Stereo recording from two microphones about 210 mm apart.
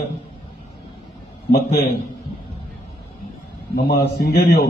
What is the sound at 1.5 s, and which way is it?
Speech, 45° left (ahead or behind).